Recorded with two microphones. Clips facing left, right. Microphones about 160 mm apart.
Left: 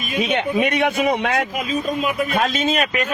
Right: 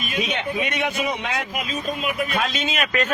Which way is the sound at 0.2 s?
55° left (ahead or behind).